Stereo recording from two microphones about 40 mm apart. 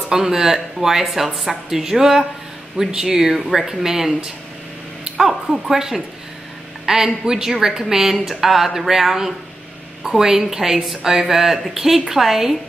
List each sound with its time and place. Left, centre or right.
0.1 s a woman's voice: centre
5.0 s a sound: centre
5.8 s a woman's voice: centre